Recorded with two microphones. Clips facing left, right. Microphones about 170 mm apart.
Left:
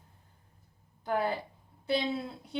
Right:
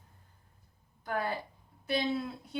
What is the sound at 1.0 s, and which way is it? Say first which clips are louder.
A woman's voice: left 3 dB; 25° left (ahead or behind).